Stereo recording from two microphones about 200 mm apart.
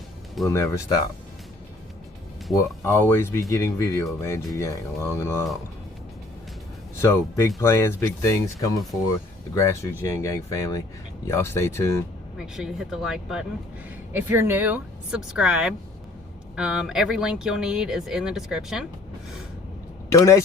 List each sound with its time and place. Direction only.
0.4 s speech: 15° left (ahead or behind)
2.6 s speech: 15° left (ahead or behind)
7.0 s speech: 15° left (ahead or behind)
12.4 s speech: centre (ahead or behind)
20.1 s speech: 15° left (ahead or behind)